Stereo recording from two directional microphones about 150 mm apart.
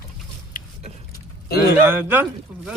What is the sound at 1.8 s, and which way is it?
Speech, 15° right (ahead or behind).